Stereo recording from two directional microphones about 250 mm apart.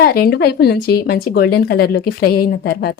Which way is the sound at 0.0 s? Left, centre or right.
Left.